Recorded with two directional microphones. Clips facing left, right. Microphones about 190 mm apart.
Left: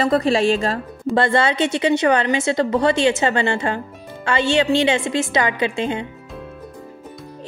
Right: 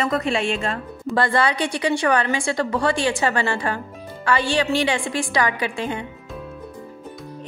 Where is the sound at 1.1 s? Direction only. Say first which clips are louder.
Left 3 dB; 25° left (ahead or behind).